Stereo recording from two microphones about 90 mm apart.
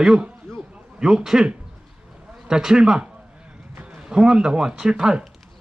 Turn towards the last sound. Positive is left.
turn(degrees=-10)  # may be behind; listen again after turning